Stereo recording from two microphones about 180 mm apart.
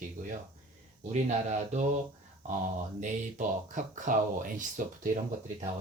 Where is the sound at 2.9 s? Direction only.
45° right (ahead or behind).